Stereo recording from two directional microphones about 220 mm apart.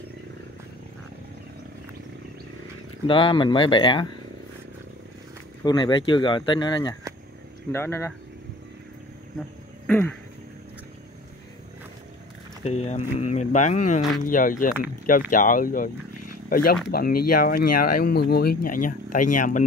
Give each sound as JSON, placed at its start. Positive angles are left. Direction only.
{"t": 3.1, "sound": "speech", "side_deg": 25}
{"t": 5.6, "sound": "speech", "side_deg": 20}
{"t": 9.8, "sound": "a sound", "side_deg": 5}
{"t": 12.6, "sound": "speech", "side_deg": 30}